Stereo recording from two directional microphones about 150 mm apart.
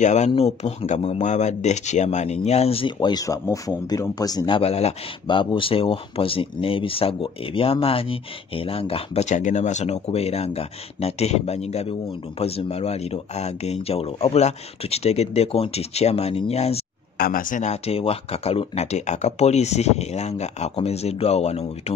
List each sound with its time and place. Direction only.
0.0 s speech: 50° left (ahead or behind)
17.2 s speech: 65° left (ahead or behind); by 21.9 s 45° left (ahead or behind)